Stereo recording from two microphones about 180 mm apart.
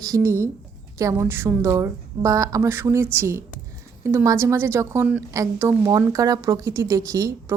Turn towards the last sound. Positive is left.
turn(degrees=-15)  # may be behind; listen again after turning